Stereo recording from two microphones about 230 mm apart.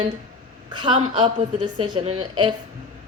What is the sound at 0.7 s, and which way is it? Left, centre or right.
Speech, centre.